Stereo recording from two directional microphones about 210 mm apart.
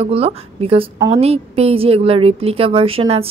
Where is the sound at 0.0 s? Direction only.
30° right (ahead or behind).